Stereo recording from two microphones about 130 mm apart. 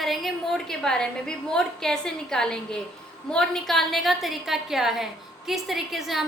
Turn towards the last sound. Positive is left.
turn(degrees=0)  # may be behind; listen again after turning